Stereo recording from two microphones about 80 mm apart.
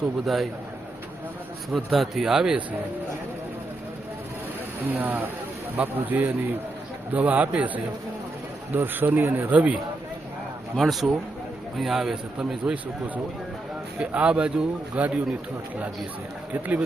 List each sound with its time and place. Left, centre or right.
1.7 s a man's voice: centre
4.9 s a man's voice: right
8.7 s a man's voice: right
10.8 s a man's voice: centre
14.0 s speech: centre
16.5 s a man's voice: centre